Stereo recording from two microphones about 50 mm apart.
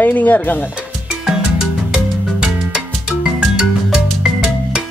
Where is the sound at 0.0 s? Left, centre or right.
Left.